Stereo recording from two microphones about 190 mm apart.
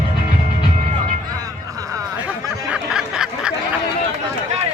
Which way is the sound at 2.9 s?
5° right (ahead or behind).